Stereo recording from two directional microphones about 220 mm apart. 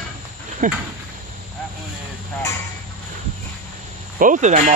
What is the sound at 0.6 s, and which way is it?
Speech, 35° right (ahead or behind).